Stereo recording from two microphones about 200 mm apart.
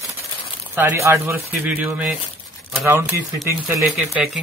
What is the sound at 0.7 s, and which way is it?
Speech, 15° right (ahead or behind).